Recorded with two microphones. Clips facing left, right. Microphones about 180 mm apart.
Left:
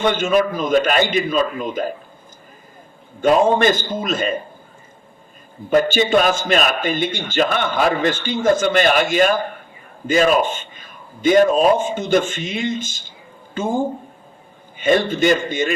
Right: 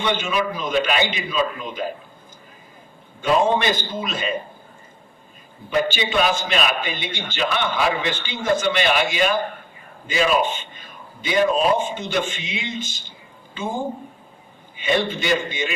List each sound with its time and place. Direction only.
0.0 s a man's voice: 45° left (ahead or behind)
3.2 s a man's voice: 45° left (ahead or behind)
5.7 s a man's voice: 45° left (ahead or behind)